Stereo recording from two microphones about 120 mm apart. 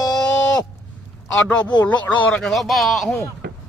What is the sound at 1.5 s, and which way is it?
Speech, 10° left (ahead or behind).